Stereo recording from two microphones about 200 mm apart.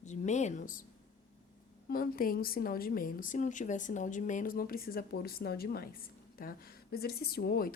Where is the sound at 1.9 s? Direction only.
45° left (ahead or behind).